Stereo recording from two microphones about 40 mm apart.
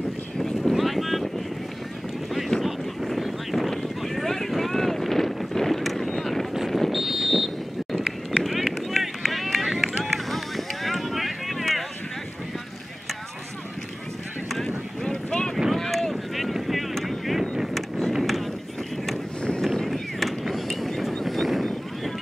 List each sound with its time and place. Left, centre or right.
0.4 s a sound: centre
2.6 s boat: centre
3.7 s a sound: centre
6.1 s boat: centre
6.7 s vehicle: centre
8.0 s run: right
8.9 s run: centre
15.0 s boat: centre
15.7 s boat: centre
17.3 s vehicle: centre
17.7 s vehicle: centre
18.2 s run: centre
19.6 s a sound: centre